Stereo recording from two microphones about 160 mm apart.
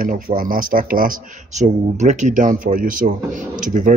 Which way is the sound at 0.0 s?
60° right (ahead or behind).